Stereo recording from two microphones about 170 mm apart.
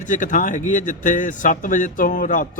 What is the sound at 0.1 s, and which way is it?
Speech, 50° left (ahead or behind).